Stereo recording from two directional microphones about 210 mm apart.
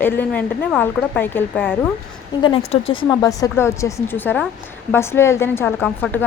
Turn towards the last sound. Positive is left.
turn(degrees=10)  # may be behind; listen again after turning